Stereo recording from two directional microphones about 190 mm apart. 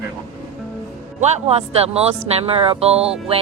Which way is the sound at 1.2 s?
35° right (ahead or behind).